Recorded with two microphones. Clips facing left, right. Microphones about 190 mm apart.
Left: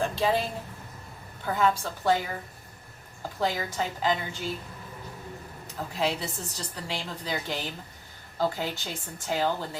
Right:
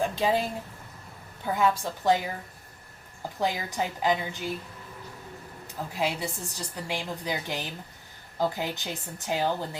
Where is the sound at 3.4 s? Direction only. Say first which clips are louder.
Even; 15° right (ahead or behind).